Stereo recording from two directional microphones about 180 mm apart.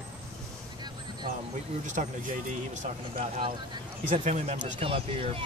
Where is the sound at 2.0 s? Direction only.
40° right (ahead or behind).